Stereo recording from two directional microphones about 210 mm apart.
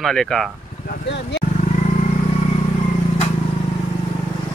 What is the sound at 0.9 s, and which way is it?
Speech, 55° left (ahead or behind).